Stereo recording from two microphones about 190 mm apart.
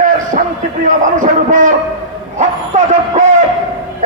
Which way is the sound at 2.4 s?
40° right (ahead or behind).